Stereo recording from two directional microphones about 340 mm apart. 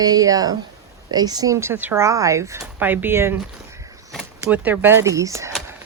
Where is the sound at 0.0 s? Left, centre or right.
Centre.